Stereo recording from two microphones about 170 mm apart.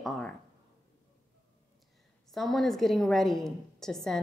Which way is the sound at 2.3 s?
Centre (ahead or behind).